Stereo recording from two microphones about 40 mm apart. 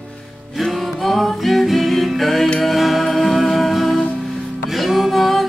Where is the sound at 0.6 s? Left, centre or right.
Centre.